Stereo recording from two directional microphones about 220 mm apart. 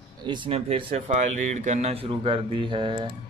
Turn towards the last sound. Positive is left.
turn(degrees=-20)  # may be behind; listen again after turning